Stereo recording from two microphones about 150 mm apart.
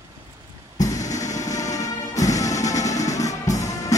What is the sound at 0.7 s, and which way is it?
Music, 25° left (ahead or behind).